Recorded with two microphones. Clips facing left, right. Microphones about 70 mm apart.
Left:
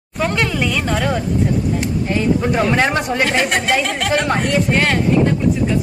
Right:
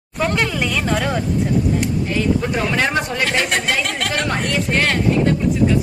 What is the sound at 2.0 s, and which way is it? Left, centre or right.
Speech, centre.